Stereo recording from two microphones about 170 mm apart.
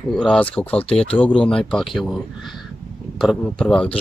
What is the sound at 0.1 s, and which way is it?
Speech, 5° left (ahead or behind).